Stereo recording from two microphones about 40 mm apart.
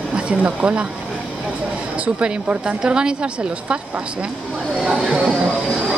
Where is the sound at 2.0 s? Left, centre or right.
Right.